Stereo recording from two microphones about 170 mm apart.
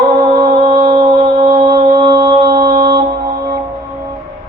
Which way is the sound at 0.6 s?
60° right (ahead or behind).